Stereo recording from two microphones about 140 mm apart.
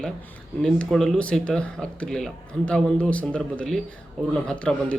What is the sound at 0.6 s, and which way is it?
Speech, 5° left (ahead or behind).